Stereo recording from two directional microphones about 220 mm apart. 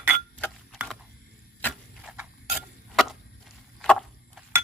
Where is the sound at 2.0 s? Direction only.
5° right (ahead or behind).